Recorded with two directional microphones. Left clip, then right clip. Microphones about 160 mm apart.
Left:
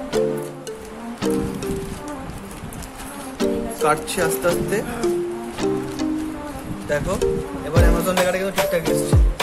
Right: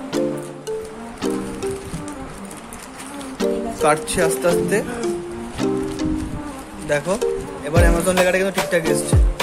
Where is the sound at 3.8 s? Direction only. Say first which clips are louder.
Right 2 dB; 20° right (ahead or behind).